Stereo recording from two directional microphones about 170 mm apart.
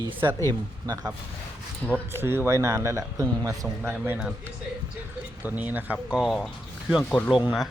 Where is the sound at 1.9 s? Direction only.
15° right (ahead or behind).